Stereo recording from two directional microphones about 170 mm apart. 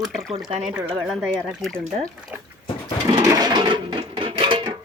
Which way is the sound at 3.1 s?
25° right (ahead or behind).